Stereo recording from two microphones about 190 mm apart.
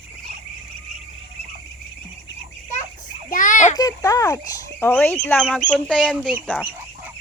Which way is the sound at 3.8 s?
20° left (ahead or behind).